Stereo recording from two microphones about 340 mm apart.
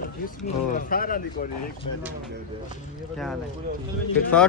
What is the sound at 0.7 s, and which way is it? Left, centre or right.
Speech, left.